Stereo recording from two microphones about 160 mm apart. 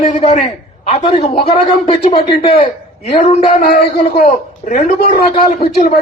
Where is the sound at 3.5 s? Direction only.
60° left (ahead or behind).